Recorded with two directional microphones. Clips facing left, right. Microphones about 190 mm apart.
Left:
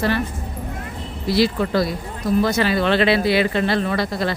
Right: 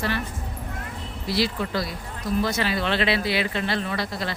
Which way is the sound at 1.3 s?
50° left (ahead or behind).